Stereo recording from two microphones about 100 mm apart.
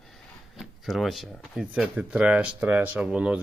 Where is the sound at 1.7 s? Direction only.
10° right (ahead or behind).